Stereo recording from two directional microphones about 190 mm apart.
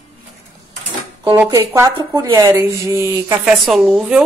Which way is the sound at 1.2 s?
10° right (ahead or behind).